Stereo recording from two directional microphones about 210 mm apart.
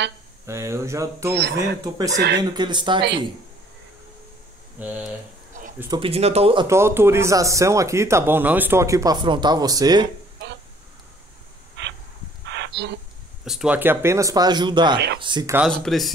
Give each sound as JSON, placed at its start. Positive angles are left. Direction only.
{"t": 0.5, "sound": "a man's voice", "side_deg": -15}
{"t": 1.3, "sound": "speech", "side_deg": -50}
{"t": 2.0, "sound": "a man's voice", "side_deg": -15}
{"t": 4.7, "sound": "a man's voice", "side_deg": -5}
{"t": 5.5, "sound": "a sound", "side_deg": -35}
{"t": 5.9, "sound": "a man's voice", "side_deg": -30}
{"t": 11.8, "sound": "a sound", "side_deg": -60}
{"t": 13.5, "sound": "a man's voice", "side_deg": -5}
{"t": 15.5, "sound": "speech", "side_deg": 0}